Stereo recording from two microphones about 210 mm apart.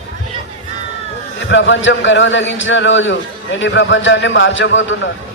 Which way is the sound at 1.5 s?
60° left (ahead or behind).